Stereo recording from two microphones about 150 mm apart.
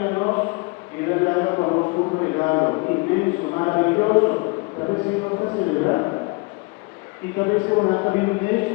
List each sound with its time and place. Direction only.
0.0 s mantra: 25° left (ahead or behind)
1.1 s a sound: 20° left (ahead or behind)
5.4 s speech: 25° left (ahead or behind)
7.3 s speech: 25° left (ahead or behind)